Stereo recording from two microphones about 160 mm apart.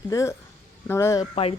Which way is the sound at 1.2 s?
40° left (ahead or behind).